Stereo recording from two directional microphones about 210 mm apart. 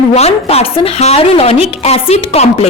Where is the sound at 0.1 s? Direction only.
30° left (ahead or behind).